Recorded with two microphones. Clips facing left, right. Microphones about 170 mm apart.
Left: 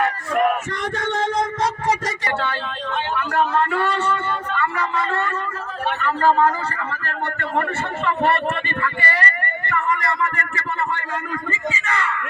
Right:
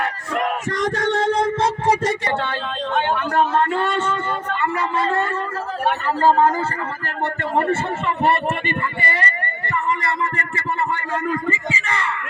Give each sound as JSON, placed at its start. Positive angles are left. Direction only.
{"t": 0.8, "sound": "a sound", "side_deg": -35}
{"t": 3.3, "sound": "a man's voice", "side_deg": -30}
{"t": 11.9, "sound": "speech", "side_deg": -30}